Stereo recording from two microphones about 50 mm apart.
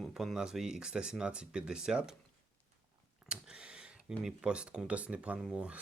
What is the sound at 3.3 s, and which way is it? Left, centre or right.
Speech, centre.